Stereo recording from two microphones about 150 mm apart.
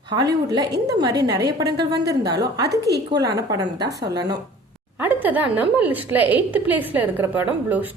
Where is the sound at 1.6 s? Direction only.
90° right.